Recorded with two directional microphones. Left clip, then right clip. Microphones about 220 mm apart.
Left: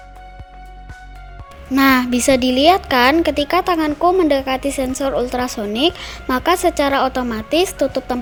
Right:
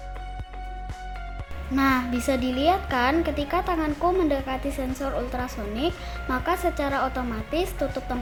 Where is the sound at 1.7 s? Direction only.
40° left (ahead or behind).